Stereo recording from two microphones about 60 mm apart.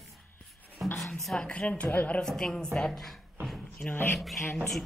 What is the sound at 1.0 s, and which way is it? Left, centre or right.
Speech, centre.